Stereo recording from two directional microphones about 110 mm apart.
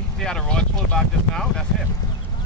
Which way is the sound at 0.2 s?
5° left (ahead or behind).